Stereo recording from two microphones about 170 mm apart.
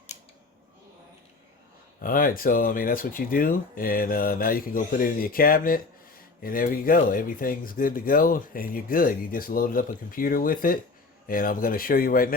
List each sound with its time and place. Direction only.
2.0 s speech: 55° left (ahead or behind)